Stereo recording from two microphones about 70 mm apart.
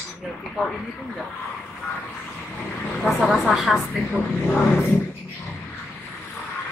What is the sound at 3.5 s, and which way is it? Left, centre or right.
Speech, centre.